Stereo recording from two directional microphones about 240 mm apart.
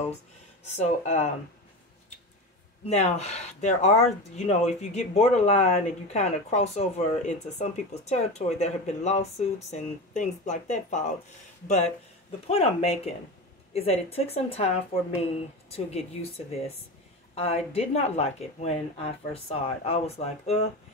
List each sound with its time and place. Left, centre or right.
0.7 s speech: left
2.8 s speech: left
15.7 s speech: left